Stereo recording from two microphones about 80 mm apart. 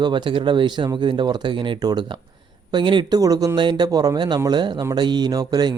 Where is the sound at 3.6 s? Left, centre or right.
Right.